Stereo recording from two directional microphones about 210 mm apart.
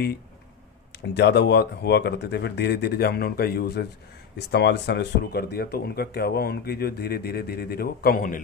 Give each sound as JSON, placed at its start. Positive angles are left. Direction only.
{"t": 1.1, "sound": "speech", "side_deg": 55}